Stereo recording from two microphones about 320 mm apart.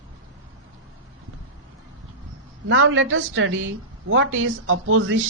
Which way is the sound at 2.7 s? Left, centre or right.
Right.